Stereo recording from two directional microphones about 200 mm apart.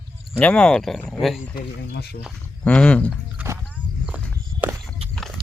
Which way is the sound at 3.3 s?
10° right (ahead or behind).